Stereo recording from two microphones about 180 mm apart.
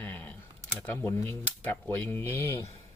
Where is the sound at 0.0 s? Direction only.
10° left (ahead or behind).